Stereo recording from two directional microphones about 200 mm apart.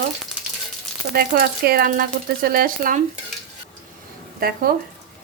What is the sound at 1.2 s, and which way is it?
Speech, 50° right (ahead or behind).